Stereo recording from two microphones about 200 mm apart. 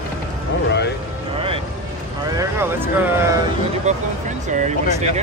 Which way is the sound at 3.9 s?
35° right (ahead or behind).